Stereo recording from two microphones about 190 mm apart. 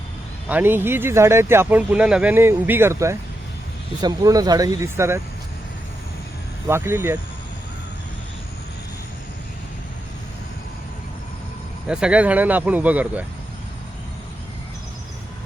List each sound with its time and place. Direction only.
0.4 s speech: 10° right (ahead or behind)
6.7 s speech: 10° right (ahead or behind)
11.9 s speech: 5° right (ahead or behind)